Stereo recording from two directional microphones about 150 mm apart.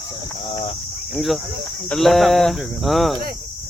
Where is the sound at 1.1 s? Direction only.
Centre (ahead or behind).